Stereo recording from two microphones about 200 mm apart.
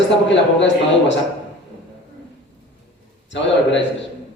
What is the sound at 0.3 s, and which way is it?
Speech, 65° left (ahead or behind).